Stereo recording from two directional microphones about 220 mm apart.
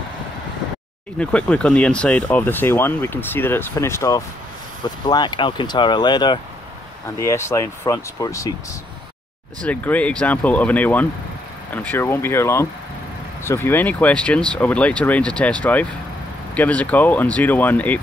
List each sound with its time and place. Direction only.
1.1 s speech: 5° left (ahead or behind)
9.6 s speech: 5° left (ahead or behind)